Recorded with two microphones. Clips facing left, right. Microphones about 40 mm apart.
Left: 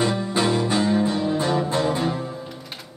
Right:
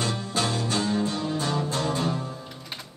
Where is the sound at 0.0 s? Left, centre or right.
Centre.